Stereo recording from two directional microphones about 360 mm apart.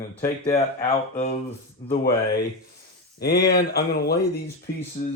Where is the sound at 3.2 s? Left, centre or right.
Left.